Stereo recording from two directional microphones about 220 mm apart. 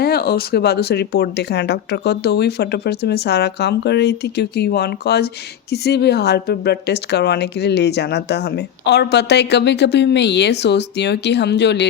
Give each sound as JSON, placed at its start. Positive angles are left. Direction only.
{"t": 0.0, "sound": "a woman's voice", "side_deg": 45}